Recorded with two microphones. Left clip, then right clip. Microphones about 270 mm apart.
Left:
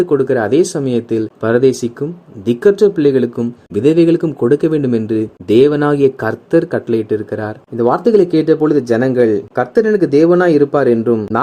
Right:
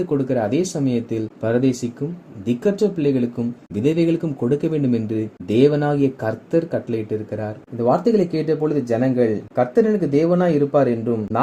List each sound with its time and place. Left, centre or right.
0.1 s speech: left